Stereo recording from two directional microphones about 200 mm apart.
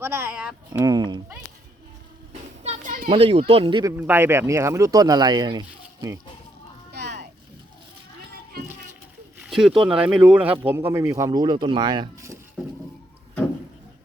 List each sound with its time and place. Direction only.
0.0 s speech: 10° right (ahead or behind)
0.7 s speech: 20° right (ahead or behind)
2.6 s a sound: 40° right (ahead or behind)
3.2 s speech: 30° right (ahead or behind)
3.9 s speech: 10° right (ahead or behind)
9.4 s speech: 5° right (ahead or behind); by 12.4 s 20° right (ahead or behind)